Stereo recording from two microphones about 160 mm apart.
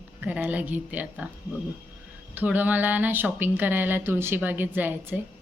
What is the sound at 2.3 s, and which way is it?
Speech, 10° right (ahead or behind).